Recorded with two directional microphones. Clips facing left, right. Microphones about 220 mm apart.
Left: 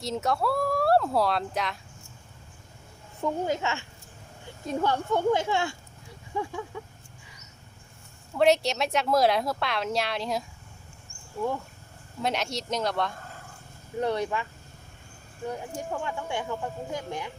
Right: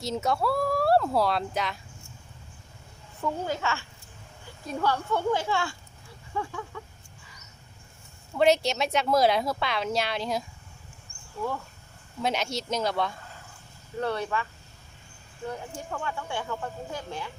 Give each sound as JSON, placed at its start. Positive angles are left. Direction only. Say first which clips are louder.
{"t": 0.0, "sound": "speech", "louder": "even", "side_deg": 0}
{"t": 3.2, "sound": "speech", "louder": "left 2 dB", "side_deg": 20}
{"t": 8.4, "sound": "speech", "louder": "even", "side_deg": 0}
{"t": 12.2, "sound": "speech", "louder": "right 1 dB", "side_deg": 0}
{"t": 14.0, "sound": "speech", "louder": "left 2 dB", "side_deg": 15}
{"t": 15.4, "sound": "speech", "louder": "left 2 dB", "side_deg": 15}